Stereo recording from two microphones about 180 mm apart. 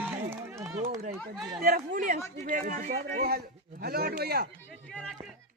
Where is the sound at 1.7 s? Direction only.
50° right (ahead or behind).